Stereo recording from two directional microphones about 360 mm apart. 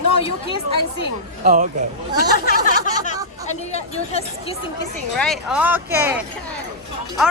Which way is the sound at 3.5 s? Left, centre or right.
Centre.